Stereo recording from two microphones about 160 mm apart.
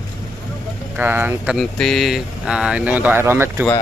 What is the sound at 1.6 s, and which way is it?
Speech, centre (ahead or behind).